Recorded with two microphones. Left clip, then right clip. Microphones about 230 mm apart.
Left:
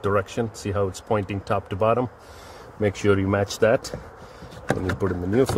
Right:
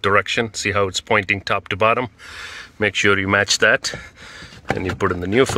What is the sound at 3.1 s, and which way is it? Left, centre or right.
Speech, right.